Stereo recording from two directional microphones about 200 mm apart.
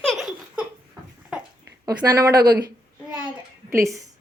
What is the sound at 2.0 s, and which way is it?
Speech, 20° right (ahead or behind).